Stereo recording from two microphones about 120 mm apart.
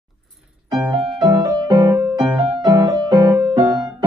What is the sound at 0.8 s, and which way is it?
Music, 40° right (ahead or behind).